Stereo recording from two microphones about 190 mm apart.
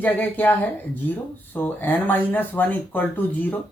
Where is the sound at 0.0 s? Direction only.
10° left (ahead or behind).